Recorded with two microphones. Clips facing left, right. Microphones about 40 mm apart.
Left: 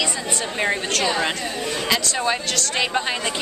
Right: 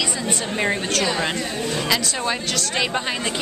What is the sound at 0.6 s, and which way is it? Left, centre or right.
Speech, centre.